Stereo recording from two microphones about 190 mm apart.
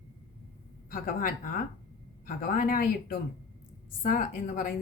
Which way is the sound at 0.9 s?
50° left (ahead or behind).